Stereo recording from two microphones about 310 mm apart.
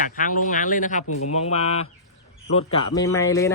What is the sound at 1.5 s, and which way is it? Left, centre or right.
A man's voice, centre.